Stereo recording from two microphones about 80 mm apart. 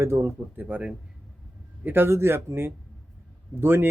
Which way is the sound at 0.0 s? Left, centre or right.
Right.